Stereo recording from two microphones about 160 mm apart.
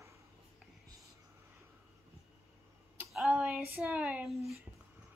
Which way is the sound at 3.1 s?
5° right (ahead or behind).